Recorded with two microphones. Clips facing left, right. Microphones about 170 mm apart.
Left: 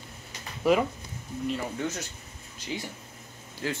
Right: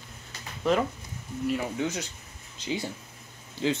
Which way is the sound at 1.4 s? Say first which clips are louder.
Right 2 dB; 10° right (ahead or behind).